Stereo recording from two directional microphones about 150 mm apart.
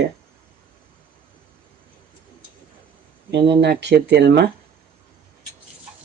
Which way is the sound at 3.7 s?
90° right.